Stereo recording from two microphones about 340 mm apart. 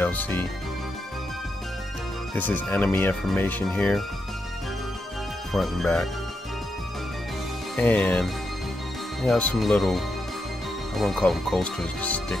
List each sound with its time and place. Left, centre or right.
0.0 s speech: centre
2.3 s speech: centre
5.5 s speech: centre
7.7 s speech: centre